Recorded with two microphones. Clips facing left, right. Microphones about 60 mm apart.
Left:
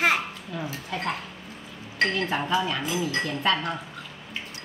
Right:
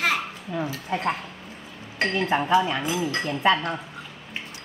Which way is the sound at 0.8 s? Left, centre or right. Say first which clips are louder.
Right 3 dB; right.